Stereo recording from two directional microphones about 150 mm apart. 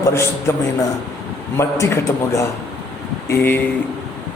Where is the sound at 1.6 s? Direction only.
20° left (ahead or behind).